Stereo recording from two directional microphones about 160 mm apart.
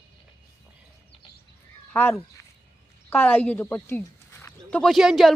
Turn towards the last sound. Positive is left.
turn(degrees=0)  # may be behind; listen again after turning